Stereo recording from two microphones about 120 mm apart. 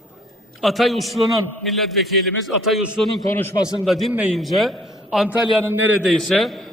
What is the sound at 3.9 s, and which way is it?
A man's voice, centre (ahead or behind).